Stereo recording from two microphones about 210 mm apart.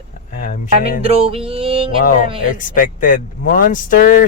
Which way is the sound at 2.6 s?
40° left (ahead or behind).